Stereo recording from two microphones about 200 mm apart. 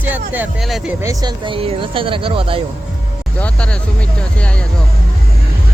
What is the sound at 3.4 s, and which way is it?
Speech, 5° left (ahead or behind).